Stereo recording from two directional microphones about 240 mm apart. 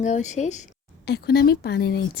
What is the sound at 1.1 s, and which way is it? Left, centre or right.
A woman's voice, left.